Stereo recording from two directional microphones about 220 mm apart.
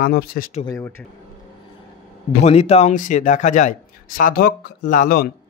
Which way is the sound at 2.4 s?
30° left (ahead or behind).